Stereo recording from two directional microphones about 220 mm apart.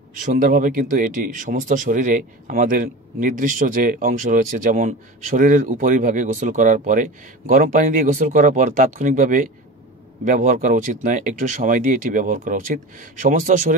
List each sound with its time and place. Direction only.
0.1 s speech: 35° right (ahead or behind)